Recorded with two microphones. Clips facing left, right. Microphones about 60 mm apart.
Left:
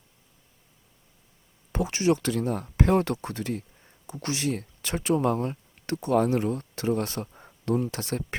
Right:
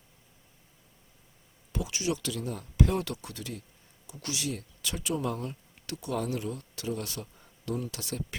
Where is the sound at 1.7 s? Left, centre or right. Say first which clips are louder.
Left 8 dB; left.